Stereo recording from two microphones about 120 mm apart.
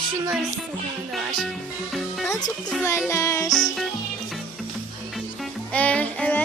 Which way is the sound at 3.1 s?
25° left (ahead or behind).